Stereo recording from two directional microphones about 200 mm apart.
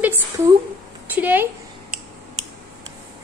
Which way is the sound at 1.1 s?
10° right (ahead or behind).